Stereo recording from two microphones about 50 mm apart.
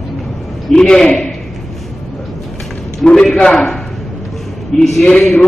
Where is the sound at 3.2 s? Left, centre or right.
Centre.